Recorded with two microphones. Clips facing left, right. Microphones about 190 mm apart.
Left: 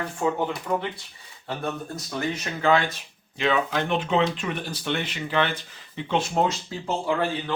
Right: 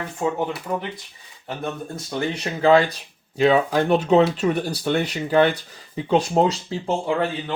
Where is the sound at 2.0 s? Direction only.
30° right (ahead or behind).